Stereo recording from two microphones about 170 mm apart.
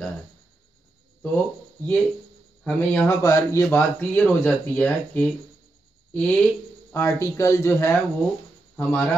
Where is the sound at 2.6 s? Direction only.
10° left (ahead or behind).